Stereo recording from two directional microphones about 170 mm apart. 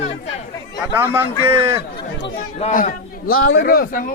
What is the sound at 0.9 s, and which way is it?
Speech, 10° right (ahead or behind).